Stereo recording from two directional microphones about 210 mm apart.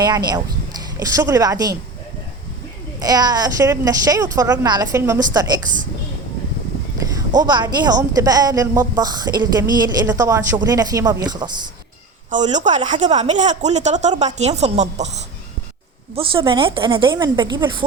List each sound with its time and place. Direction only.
0.0 s a woman's voice: 20° right (ahead or behind)
3.0 s a woman's voice: 20° right (ahead or behind)
7.3 s a woman's voice: 20° right (ahead or behind)
12.3 s a woman's voice: 35° right (ahead or behind)